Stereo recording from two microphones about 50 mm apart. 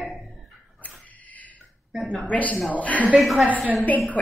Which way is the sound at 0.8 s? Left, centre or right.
Left.